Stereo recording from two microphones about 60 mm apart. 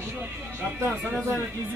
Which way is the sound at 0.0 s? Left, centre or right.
Right.